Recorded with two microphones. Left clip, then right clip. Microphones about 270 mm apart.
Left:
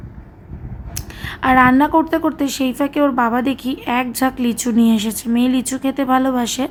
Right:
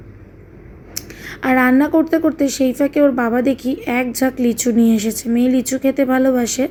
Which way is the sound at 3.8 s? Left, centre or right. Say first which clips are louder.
Even; centre.